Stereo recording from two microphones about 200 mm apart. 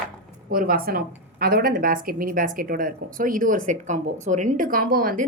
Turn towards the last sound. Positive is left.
turn(degrees=-45)  # may be behind; listen again after turning